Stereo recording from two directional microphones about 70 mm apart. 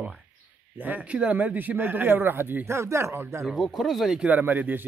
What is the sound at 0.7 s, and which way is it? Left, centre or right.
Speech, right.